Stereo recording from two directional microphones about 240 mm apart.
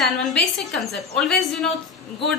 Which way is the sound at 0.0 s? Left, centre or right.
Centre.